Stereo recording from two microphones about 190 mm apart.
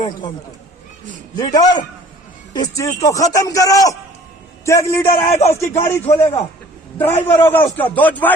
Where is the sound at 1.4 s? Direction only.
20° left (ahead or behind).